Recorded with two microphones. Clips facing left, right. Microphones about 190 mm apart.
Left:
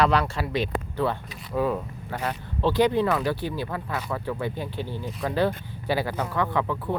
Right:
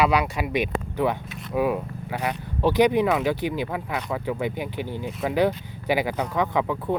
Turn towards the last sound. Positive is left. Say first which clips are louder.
# right 2 dB
turn(degrees=-15)  # may be behind; listen again after turning